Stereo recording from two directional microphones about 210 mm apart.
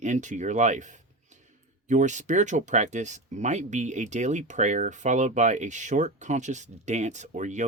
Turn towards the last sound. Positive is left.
turn(degrees=-35)  # may be behind; listen again after turning